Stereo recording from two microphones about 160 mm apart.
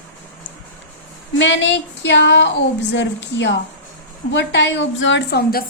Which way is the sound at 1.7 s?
90° left.